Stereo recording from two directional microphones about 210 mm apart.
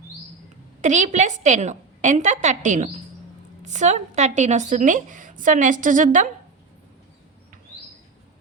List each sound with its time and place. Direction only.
0.8 s speech: 35° right (ahead or behind)